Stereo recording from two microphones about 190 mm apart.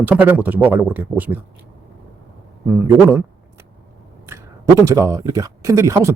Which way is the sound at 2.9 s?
15° right (ahead or behind).